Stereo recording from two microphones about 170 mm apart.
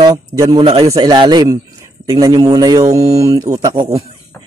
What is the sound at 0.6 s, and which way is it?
Speech, 35° right (ahead or behind).